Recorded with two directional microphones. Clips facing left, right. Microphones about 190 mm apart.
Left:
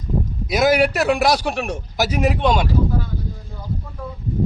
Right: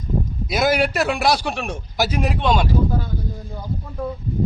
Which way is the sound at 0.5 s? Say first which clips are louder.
Left 3 dB; centre (ahead or behind).